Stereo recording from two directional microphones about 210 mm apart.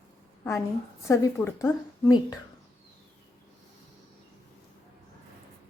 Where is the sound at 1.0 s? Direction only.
15° left (ahead or behind).